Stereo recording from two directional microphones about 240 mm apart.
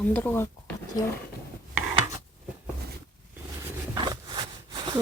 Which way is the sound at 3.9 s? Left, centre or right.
Centre.